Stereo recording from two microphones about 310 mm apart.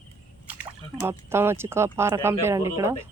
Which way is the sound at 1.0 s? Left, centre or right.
Centre.